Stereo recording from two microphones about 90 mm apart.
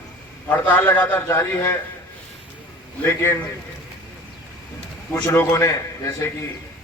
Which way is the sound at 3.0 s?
30° left (ahead or behind).